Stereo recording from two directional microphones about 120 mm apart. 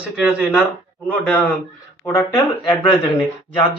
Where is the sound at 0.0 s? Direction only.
10° right (ahead or behind).